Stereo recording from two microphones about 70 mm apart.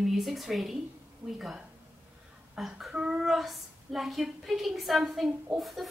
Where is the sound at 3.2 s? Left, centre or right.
Centre.